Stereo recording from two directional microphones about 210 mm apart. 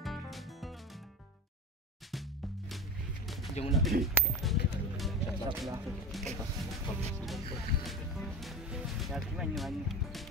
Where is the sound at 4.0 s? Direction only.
Centre (ahead or behind).